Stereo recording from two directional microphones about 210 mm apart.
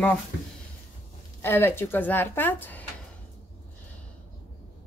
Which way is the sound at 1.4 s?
10° left (ahead or behind).